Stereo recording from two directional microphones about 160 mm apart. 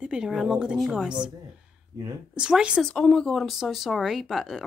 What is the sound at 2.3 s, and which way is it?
Speech, 5° right (ahead or behind).